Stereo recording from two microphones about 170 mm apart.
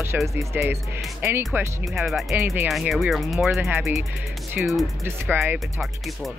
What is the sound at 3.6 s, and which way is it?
Speech, 15° right (ahead or behind).